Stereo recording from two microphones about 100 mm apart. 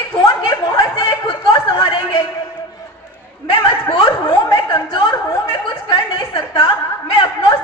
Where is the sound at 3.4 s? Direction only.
55° left (ahead or behind).